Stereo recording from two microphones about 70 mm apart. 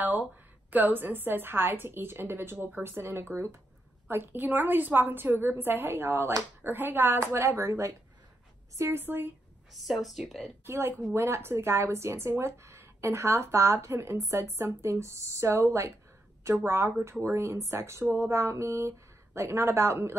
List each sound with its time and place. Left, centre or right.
0.7 s speech: right
9.0 s speech: right
9.8 s speech: centre
10.6 s speech: right